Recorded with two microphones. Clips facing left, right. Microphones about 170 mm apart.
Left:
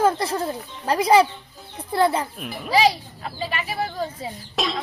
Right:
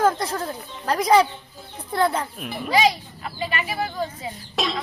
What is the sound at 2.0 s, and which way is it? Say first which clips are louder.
Speech: left 2 dB; 5° left (ahead or behind).